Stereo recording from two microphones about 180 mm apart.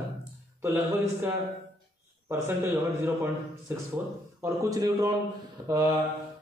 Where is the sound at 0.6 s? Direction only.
15° right (ahead or behind).